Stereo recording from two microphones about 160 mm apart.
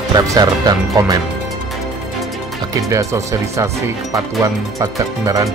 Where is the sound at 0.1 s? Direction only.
25° right (ahead or behind).